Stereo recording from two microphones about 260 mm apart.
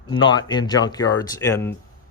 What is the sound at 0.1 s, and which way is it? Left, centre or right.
Speech, centre.